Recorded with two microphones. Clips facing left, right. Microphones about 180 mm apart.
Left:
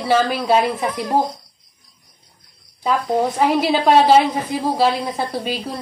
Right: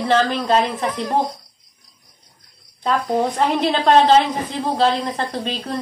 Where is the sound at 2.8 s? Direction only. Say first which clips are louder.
Left 1 dB; 5° left (ahead or behind).